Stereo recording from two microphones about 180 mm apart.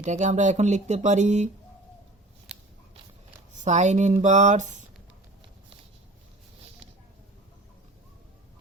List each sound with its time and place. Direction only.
0.0 s speech: 45° right (ahead or behind)
2.5 s biting: 5° right (ahead or behind)
3.6 s speech: 40° right (ahead or behind)